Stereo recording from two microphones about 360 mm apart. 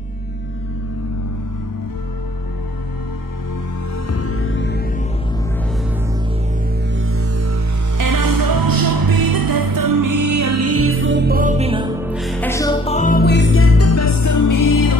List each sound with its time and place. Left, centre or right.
4.1 s music: left
7.0 s music: right
8.0 s music: right; by 15.0 s left